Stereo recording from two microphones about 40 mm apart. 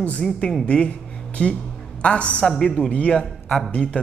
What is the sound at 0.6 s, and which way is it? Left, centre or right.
A woman's voice, left.